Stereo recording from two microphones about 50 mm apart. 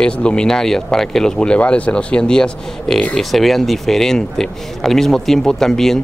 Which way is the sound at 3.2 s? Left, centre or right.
Centre.